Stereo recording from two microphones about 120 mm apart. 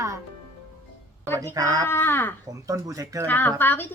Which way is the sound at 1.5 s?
30° right (ahead or behind).